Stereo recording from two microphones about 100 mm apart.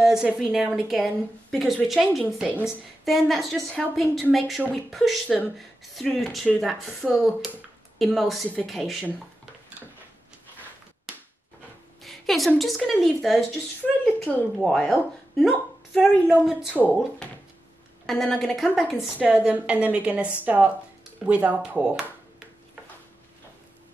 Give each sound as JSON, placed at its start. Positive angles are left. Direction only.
{"t": 0.0, "sound": "a woman's voice", "side_deg": -5}
{"t": 7.1, "sound": "a woman's voice", "side_deg": 0}
{"t": 12.0, "sound": "a sound", "side_deg": 0}
{"t": 12.5, "sound": "a woman's voice", "side_deg": 0}
{"t": 14.0, "sound": "speech", "side_deg": 15}
{"t": 14.6, "sound": "a woman's voice", "side_deg": 5}
{"t": 18.0, "sound": "a woman's voice", "side_deg": 5}